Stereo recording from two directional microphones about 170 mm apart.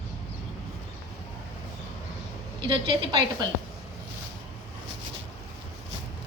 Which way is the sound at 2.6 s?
30° right (ahead or behind).